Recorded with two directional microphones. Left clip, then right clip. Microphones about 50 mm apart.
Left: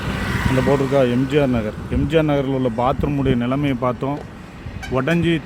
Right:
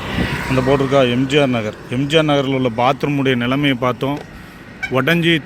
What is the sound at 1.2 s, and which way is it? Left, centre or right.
Speech, left.